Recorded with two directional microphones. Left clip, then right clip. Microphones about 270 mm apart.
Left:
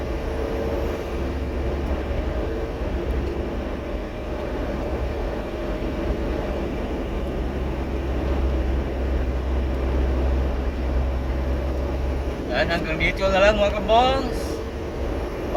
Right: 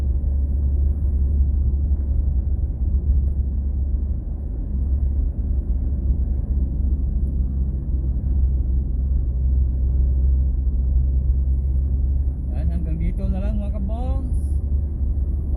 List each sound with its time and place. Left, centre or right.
12.5 s vehicle: centre